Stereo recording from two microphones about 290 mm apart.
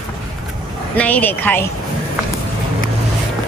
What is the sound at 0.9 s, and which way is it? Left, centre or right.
Speech, centre.